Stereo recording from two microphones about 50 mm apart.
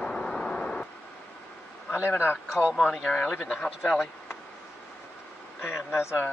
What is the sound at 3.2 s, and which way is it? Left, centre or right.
Speech, centre.